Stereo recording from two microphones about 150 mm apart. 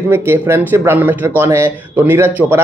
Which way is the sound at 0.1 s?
15° right (ahead or behind).